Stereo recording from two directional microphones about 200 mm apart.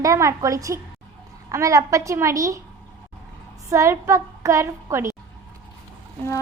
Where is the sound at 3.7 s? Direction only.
15° right (ahead or behind).